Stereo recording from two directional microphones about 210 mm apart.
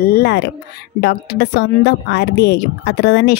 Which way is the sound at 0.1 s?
50° left (ahead or behind).